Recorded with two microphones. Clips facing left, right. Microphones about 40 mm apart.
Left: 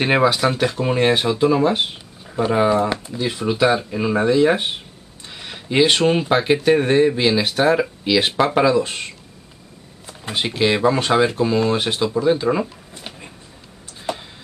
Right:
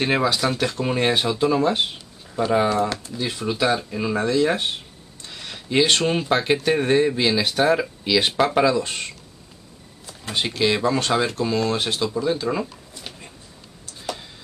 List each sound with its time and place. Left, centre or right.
0.0 s speech: centre